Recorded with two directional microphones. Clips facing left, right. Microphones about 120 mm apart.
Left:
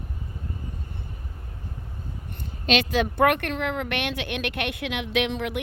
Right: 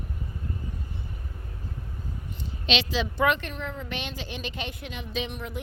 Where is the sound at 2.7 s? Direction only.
50° left (ahead or behind).